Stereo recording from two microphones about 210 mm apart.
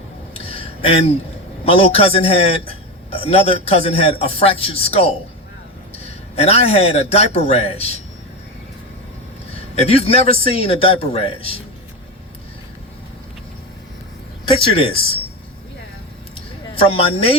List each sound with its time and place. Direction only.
0.3 s a sound: 25° left (ahead or behind)
1.6 s a man's voice: 30° left (ahead or behind)
9.8 s a man's voice: 30° left (ahead or behind)
14.4 s speech: 25° left (ahead or behind)
16.7 s a man's voice: 25° left (ahead or behind)